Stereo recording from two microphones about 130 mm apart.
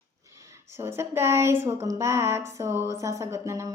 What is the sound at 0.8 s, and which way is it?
A woman's voice, 20° right (ahead or behind).